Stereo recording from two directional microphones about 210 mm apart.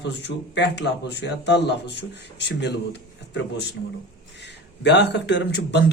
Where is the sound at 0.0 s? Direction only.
55° left (ahead or behind).